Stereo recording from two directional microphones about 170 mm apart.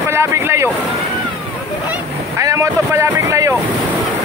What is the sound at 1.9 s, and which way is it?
Boat, 15° right (ahead or behind).